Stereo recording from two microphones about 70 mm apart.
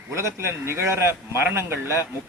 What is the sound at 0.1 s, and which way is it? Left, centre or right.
A man's voice, right.